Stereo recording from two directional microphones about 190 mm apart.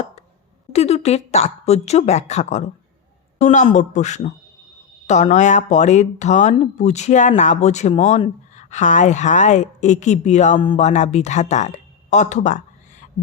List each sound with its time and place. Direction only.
0.7 s speech: 35° left (ahead or behind)